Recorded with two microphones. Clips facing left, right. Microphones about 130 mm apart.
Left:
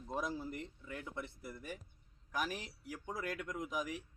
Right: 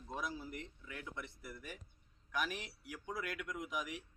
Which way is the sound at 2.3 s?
40° left (ahead or behind).